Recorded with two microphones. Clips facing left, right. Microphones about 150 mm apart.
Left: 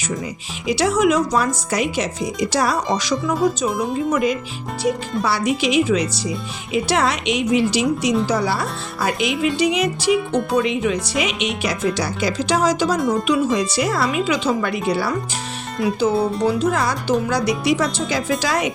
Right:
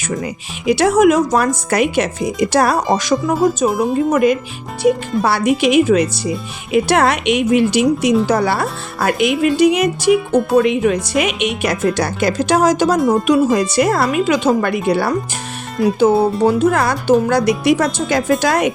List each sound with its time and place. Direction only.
0.7 s speech: 55° right (ahead or behind)
15.8 s speech: centre (ahead or behind)
16.4 s speech: 50° right (ahead or behind)